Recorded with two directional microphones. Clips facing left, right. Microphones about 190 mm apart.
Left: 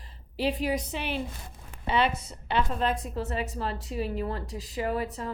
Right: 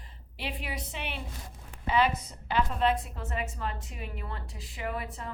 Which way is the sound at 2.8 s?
40° left (ahead or behind).